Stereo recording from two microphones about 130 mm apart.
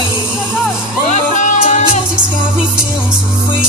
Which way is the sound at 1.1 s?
65° left (ahead or behind).